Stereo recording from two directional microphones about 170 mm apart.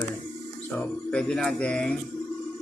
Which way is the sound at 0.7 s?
5° left (ahead or behind).